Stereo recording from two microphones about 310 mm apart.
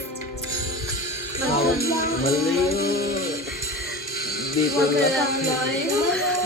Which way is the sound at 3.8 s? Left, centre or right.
Left.